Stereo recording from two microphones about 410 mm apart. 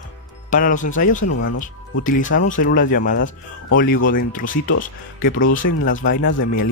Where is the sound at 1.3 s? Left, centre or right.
Left.